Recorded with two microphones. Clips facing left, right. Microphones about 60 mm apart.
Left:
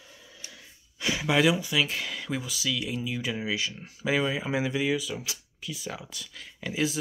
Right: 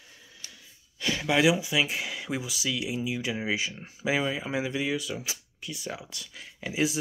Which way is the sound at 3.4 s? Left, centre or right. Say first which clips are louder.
Right 1 dB; right.